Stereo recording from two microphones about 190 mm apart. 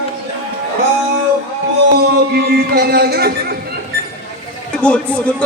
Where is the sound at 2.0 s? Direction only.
55° right (ahead or behind).